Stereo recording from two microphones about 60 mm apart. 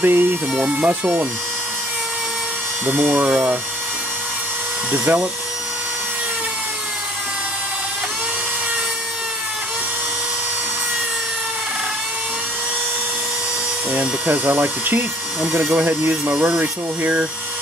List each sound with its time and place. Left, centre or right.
0.0 s speech: right
0.6 s speech: centre
2.9 s speech: right
4.9 s speech: centre
13.9 s speech: right
14.4 s speech: right
15.4 s speech: centre